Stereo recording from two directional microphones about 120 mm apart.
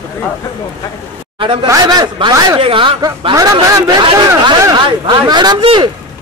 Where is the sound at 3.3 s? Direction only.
30° right (ahead or behind).